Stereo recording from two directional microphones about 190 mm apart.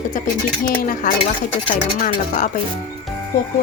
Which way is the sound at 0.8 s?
50° left (ahead or behind).